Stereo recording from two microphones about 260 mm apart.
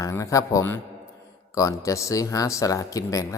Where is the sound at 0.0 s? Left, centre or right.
Centre.